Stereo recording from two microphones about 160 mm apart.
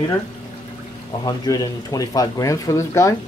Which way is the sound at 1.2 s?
25° left (ahead or behind).